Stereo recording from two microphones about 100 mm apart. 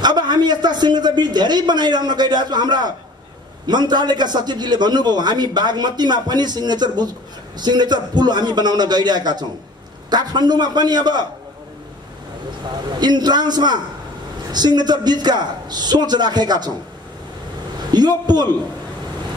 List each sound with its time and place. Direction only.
0.0 s a man's voice: 45° right (ahead or behind)
13.0 s a man's voice: 45° right (ahead or behind)
17.9 s a man's voice: 45° right (ahead or behind)